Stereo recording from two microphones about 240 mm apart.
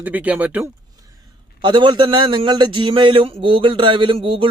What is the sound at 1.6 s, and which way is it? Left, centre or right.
A man's voice, centre.